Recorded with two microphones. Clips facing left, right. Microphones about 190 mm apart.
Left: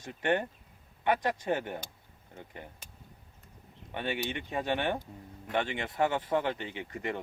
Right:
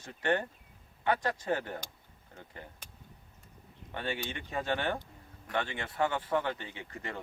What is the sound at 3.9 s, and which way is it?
Speech, 15° left (ahead or behind).